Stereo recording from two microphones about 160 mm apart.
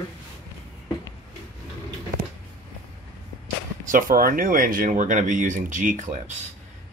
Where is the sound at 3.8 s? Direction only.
60° right (ahead or behind).